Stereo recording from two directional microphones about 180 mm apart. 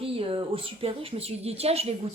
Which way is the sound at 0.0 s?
30° right (ahead or behind).